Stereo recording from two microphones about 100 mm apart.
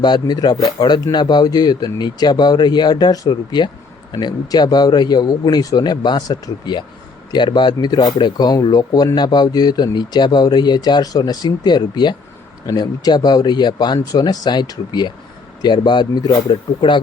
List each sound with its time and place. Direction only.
0.0 s speech: 45° left (ahead or behind)